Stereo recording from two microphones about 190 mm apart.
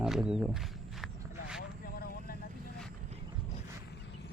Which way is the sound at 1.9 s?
50° left (ahead or behind).